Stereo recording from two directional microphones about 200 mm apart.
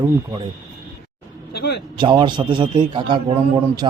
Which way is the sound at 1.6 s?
55° left (ahead or behind).